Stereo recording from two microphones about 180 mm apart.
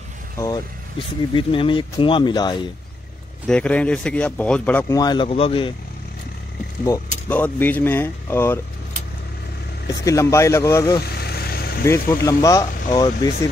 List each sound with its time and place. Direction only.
0.4 s speech: 25° left (ahead or behind)
3.4 s speech: 5° left (ahead or behind)
4.9 s speech: 25° left (ahead or behind)
7.2 s speech: 10° left (ahead or behind)
10.0 s speech: 15° left (ahead or behind)
11.1 s vehicle: 60° left (ahead or behind)
11.8 s speech: 15° left (ahead or behind)